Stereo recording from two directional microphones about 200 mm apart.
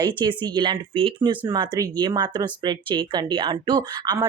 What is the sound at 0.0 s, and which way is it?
Speech, 20° right (ahead or behind).